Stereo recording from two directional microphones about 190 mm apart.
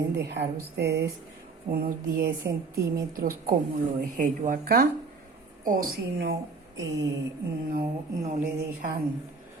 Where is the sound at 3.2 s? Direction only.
50° right (ahead or behind).